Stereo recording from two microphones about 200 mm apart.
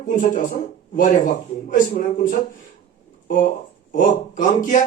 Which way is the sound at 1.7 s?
40° left (ahead or behind).